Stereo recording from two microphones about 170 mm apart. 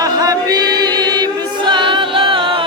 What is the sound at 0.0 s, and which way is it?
Music, 20° right (ahead or behind).